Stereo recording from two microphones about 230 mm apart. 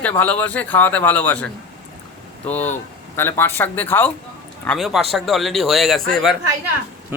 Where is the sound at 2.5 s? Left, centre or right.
Centre.